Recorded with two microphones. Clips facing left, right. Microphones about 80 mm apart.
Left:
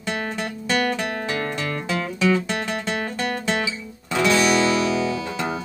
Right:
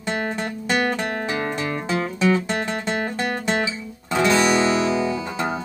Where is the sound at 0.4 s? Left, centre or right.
Right.